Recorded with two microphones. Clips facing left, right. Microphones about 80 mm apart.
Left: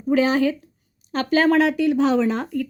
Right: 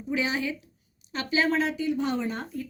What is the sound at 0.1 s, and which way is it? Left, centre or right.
Speech, left.